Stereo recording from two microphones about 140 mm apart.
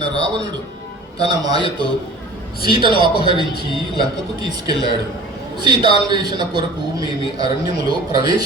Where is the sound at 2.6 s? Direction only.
35° right (ahead or behind).